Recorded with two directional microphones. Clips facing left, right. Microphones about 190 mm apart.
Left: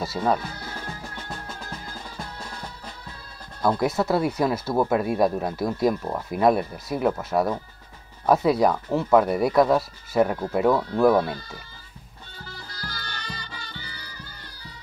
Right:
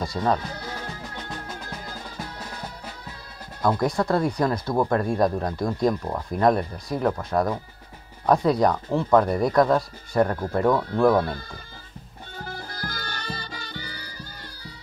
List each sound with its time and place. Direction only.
0.0 s speech: 5° left (ahead or behind)
3.8 s speech: 5° left (ahead or behind)
12.4 s music: 50° right (ahead or behind)